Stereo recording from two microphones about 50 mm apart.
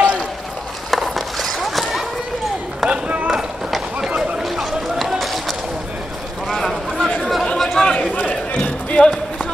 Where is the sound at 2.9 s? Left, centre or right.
Right.